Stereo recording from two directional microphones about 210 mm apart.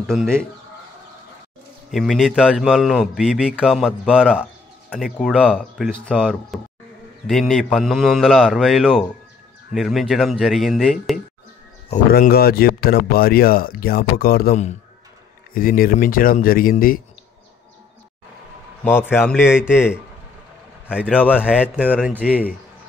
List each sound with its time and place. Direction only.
0.0 s speech: 5° right (ahead or behind)
1.9 s speech: centre (ahead or behind)
12.1 s speech: 45° left (ahead or behind)
18.9 s speech: 10° left (ahead or behind)
19.3 s speech: 5° right (ahead or behind)